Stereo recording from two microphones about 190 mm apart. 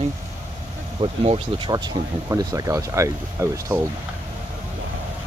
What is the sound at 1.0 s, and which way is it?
Speech, 30° right (ahead or behind).